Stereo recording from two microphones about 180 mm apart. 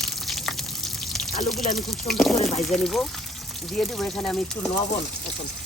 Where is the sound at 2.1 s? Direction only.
Centre (ahead or behind).